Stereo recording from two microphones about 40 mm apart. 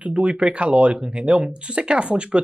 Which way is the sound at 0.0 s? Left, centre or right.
Right.